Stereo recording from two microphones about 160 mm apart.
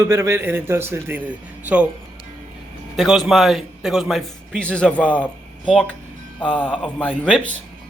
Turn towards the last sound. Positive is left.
turn(degrees=5)  # may be behind; listen again after turning